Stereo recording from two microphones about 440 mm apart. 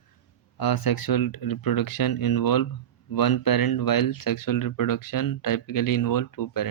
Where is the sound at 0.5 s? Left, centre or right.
Left.